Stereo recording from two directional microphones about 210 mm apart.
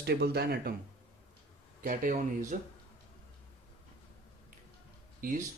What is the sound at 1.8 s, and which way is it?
Speech, 40° right (ahead or behind).